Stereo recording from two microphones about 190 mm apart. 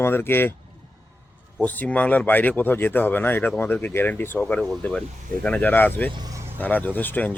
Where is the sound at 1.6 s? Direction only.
10° left (ahead or behind).